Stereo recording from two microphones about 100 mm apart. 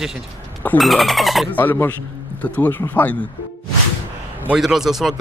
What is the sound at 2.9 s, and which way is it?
Speech, 15° left (ahead or behind).